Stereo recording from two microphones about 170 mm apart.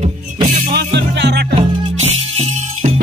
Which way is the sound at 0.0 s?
35° right (ahead or behind).